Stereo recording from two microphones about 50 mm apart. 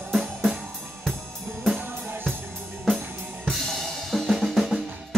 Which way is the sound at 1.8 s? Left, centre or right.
Right.